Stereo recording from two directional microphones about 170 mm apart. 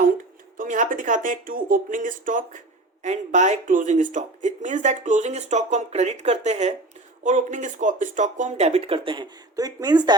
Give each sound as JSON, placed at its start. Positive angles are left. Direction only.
{"t": 0.5, "sound": "speech", "side_deg": -50}